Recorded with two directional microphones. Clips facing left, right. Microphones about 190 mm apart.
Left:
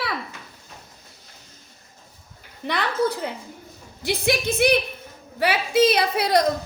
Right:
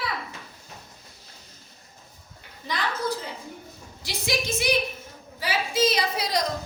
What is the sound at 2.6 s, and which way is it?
A woman's voice, 65° left (ahead or behind).